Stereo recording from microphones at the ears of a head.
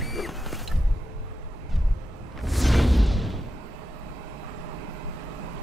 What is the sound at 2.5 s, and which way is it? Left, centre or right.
Music, centre.